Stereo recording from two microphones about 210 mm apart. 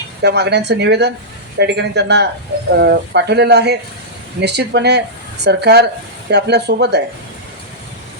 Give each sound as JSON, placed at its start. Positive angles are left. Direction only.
{"t": 0.2, "sound": "speech", "side_deg": -55}